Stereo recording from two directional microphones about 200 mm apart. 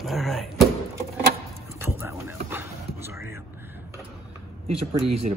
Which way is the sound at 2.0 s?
10° right (ahead or behind).